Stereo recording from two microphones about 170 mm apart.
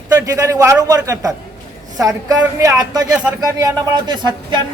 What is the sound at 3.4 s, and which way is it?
A man's voice, 20° right (ahead or behind).